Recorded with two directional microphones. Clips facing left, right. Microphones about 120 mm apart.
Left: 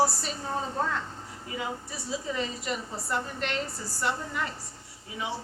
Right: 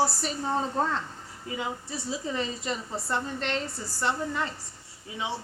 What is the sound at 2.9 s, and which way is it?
Speech, 25° right (ahead or behind).